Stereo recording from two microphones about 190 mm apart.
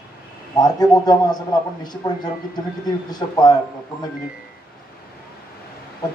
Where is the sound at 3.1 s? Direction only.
20° left (ahead or behind).